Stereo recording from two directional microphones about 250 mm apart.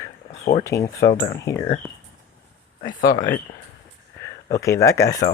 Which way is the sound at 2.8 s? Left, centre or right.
Left.